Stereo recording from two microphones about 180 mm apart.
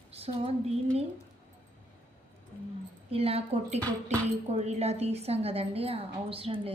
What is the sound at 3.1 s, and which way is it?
A woman's voice, 35° right (ahead or behind).